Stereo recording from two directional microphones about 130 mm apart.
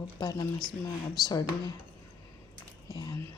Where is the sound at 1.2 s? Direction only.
30° left (ahead or behind).